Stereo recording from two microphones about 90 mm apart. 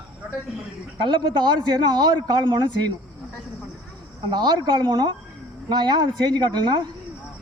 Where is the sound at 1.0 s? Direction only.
60° right (ahead or behind).